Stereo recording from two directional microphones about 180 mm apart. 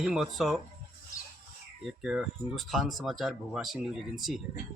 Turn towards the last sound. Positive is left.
turn(degrees=0)  # may be behind; listen again after turning